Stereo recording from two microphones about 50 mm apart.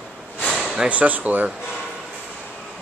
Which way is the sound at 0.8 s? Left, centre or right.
Right.